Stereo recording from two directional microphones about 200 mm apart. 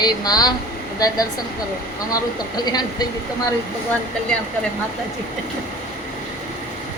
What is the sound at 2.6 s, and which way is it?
Speech, 20° left (ahead or behind).